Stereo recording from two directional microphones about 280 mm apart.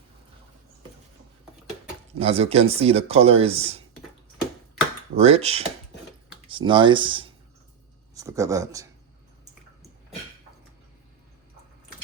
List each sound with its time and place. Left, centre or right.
2.1 s speech: right
5.1 s speech: right